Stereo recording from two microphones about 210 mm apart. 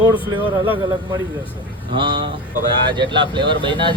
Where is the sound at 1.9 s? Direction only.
20° right (ahead or behind).